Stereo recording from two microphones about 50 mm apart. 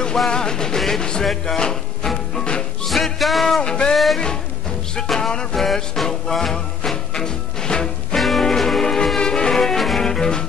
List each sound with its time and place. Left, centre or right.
0.3 s music: centre
2.9 s music: centre
3.6 s music: centre
3.9 s speech: centre
4.9 s music: centre
8.2 s music: centre